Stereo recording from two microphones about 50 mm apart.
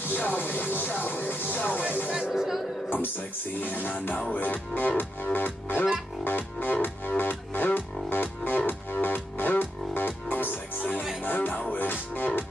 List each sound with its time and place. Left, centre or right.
0.1 s music: left
2.3 s speech: centre
3.6 s music: left